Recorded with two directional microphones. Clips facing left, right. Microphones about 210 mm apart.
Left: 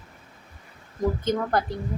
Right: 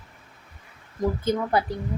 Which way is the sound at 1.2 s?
10° right (ahead or behind).